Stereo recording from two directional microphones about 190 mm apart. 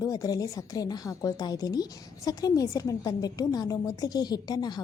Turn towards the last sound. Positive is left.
turn(degrees=20)  # may be behind; listen again after turning